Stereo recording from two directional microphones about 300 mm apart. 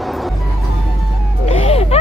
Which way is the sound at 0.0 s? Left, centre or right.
Centre.